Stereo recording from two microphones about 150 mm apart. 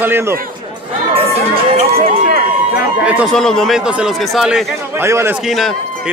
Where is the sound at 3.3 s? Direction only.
5° left (ahead or behind).